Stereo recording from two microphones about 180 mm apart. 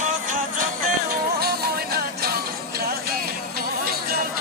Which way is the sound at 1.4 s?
60° right (ahead or behind).